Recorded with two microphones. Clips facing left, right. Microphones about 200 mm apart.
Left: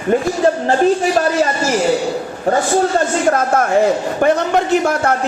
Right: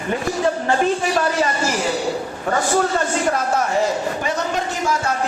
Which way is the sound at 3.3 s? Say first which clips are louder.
Left 5 dB; 50° left (ahead or behind).